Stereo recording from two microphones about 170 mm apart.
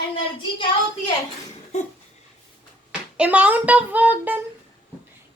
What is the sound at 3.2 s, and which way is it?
A child's voice, 10° right (ahead or behind).